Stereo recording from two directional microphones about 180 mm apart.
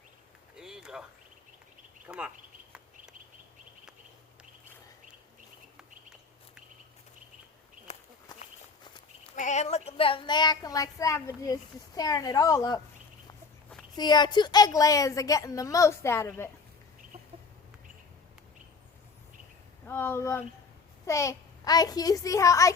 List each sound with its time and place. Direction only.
0.5 s a sound: 5° right (ahead or behind)
2.0 s speech: 5° right (ahead or behind)
7.9 s walk: 40° left (ahead or behind)
9.3 s speech: 40° left (ahead or behind); by 12.8 s 20° left (ahead or behind)
13.9 s speech: 25° left (ahead or behind)
19.9 s a child's voice: 10° left (ahead or behind)